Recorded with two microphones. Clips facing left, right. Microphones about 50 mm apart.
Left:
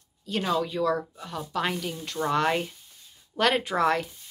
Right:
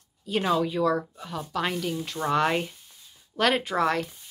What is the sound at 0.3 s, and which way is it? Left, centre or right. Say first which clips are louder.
A woman's voice: right 2 dB; centre.